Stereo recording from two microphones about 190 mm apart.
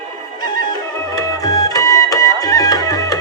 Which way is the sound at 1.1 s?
20° left (ahead or behind).